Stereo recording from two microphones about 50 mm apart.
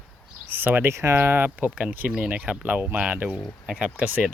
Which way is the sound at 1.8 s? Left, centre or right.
Right.